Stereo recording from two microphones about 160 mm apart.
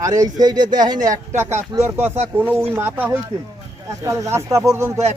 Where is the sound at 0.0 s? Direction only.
20° right (ahead or behind).